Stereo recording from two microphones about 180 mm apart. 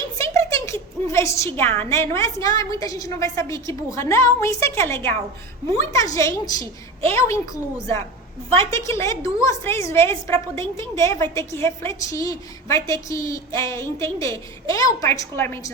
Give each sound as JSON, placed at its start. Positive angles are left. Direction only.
{"t": 0.2, "sound": "a woman's voice", "side_deg": 15}